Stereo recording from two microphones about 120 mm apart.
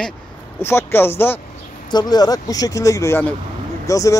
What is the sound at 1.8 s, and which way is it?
Speech, 35° left (ahead or behind).